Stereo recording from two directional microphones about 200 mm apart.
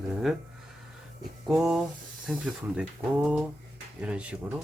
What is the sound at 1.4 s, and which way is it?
Speech, 5° right (ahead or behind).